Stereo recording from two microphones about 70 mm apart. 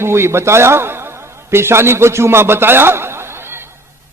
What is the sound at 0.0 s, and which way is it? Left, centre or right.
A man's voice, right.